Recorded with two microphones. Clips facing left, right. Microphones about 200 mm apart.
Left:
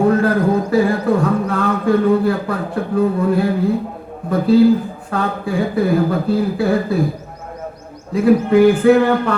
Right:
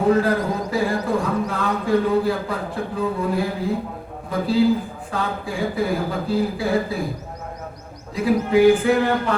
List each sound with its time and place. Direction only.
0.0 s speech: 55° left (ahead or behind)
8.1 s speech: 55° left (ahead or behind)